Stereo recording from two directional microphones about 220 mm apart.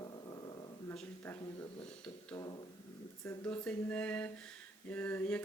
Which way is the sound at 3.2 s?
10° left (ahead or behind).